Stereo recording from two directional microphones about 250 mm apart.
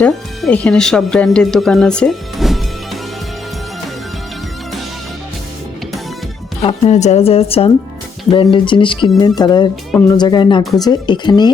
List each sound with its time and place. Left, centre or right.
0.0 s speech: centre
6.6 s speech: left